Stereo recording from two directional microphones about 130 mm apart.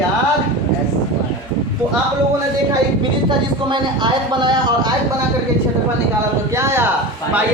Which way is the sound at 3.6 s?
35° right (ahead or behind).